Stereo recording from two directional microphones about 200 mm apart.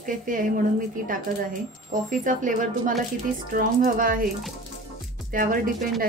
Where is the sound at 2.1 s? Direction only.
40° right (ahead or behind).